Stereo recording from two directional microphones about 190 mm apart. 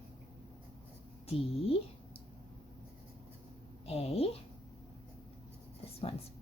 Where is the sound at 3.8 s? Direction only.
30° left (ahead or behind).